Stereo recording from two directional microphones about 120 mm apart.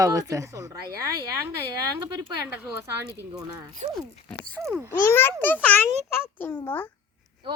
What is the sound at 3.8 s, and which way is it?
Speech, 70° right (ahead or behind).